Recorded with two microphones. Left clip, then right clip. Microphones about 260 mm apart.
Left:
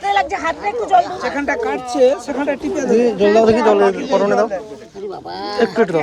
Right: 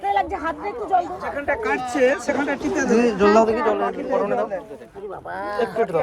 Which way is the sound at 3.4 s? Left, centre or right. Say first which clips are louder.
Left 8 dB; left.